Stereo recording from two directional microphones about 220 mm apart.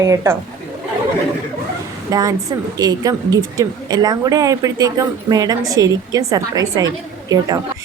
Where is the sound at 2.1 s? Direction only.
15° right (ahead or behind).